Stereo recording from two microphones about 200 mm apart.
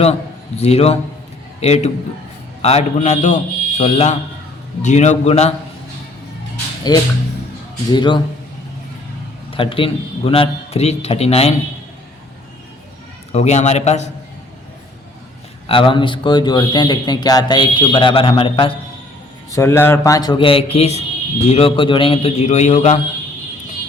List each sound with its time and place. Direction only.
0.0 s a man's voice: 30° left (ahead or behind)
6.9 s speech: 20° left (ahead or behind)
9.5 s speech: 25° left (ahead or behind)
13.3 s a man's voice: 35° left (ahead or behind)
15.6 s speech: 25° left (ahead or behind)
19.5 s a man's voice: 15° left (ahead or behind); by 23.0 s 35° left (ahead or behind)